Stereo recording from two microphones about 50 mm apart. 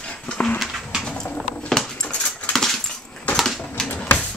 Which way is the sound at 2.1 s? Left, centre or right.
Left.